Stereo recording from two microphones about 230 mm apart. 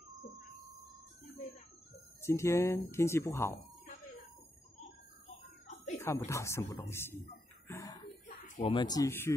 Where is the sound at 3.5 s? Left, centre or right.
Left.